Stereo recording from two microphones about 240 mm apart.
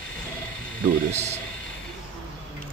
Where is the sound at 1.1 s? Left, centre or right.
Right.